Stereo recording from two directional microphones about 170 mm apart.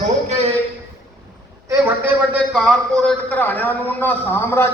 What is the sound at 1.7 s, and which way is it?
A man's voice, 10° right (ahead or behind).